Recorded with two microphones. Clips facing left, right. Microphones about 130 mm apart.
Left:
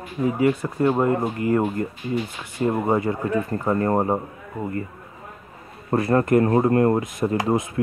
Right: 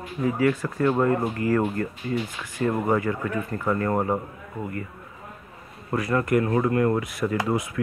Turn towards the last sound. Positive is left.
turn(degrees=25)  # may be behind; listen again after turning